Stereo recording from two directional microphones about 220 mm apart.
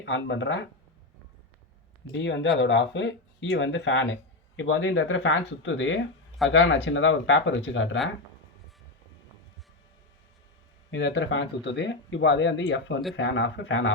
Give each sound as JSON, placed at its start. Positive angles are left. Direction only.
{"t": 0.0, "sound": "speech", "side_deg": 60}
{"t": 2.1, "sound": "speech", "side_deg": 55}
{"t": 10.9, "sound": "speech", "side_deg": 55}